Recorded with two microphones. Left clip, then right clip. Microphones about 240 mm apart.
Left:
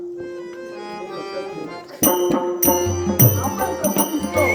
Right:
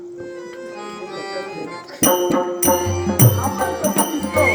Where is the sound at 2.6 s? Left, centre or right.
Centre.